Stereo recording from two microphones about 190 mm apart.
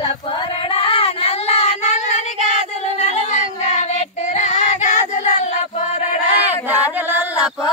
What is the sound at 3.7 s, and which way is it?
Child singing, 35° left (ahead or behind).